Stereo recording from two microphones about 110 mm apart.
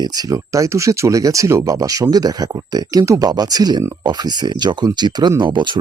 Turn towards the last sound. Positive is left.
turn(degrees=-45)  # may be behind; listen again after turning